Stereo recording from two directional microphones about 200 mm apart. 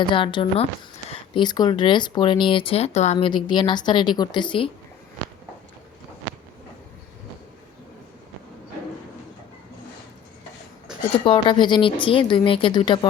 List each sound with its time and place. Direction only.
0.1 s speech: 25° left (ahead or behind)
11.1 s speech: 25° left (ahead or behind)